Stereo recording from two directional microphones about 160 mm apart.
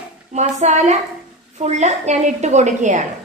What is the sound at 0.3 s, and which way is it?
A woman's voice, 45° right (ahead or behind).